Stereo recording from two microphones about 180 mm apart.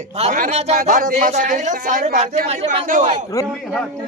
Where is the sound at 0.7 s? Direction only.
50° right (ahead or behind).